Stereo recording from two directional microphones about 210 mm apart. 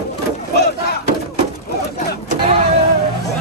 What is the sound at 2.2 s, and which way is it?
Vehicle, 25° right (ahead or behind).